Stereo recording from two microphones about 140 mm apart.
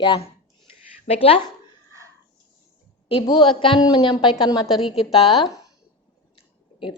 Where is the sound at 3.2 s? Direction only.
35° left (ahead or behind).